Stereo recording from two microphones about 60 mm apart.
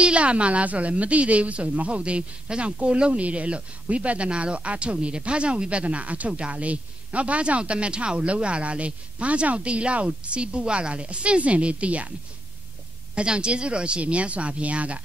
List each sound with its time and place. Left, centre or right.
0.0 s speech: centre
13.1 s speech: centre